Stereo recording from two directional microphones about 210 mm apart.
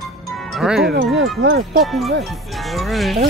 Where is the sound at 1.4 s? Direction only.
55° right (ahead or behind).